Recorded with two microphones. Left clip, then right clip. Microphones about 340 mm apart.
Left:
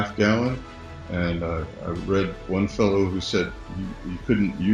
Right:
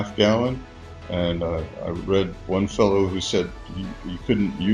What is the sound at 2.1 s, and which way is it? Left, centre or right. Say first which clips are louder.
Speech: right 2 dB; right.